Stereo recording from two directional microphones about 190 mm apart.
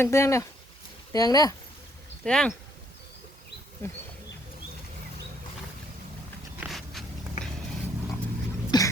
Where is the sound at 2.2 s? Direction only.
5° left (ahead or behind).